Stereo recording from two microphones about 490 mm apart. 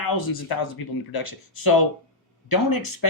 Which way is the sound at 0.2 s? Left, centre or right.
Left.